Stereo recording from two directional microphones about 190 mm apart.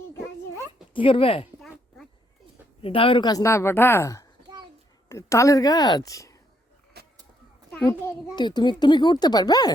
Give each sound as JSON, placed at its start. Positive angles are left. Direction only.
{"t": 0.9, "sound": "a child's voice", "side_deg": 30}
{"t": 2.8, "sound": "a woman's voice", "side_deg": 30}
{"t": 7.0, "sound": "a sound", "side_deg": -55}
{"t": 8.0, "sound": "a child's voice", "side_deg": 20}